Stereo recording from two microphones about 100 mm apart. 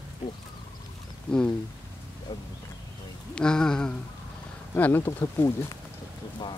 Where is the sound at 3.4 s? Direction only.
5° left (ahead or behind).